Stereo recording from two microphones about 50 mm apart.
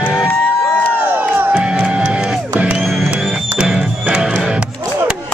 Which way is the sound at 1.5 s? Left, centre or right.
Centre.